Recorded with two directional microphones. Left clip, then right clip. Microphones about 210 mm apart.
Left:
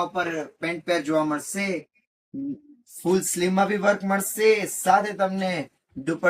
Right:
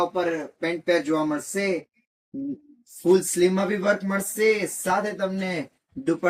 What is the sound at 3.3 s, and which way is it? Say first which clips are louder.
Speech: even; 20° left (ahead or behind).